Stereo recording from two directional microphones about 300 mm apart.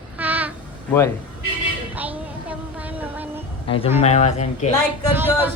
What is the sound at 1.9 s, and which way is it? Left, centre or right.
Music, centre.